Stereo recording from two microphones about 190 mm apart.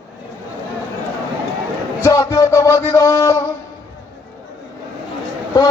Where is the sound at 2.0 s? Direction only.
20° left (ahead or behind).